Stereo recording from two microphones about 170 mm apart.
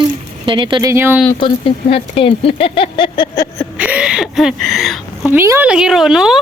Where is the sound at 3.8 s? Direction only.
5° right (ahead or behind).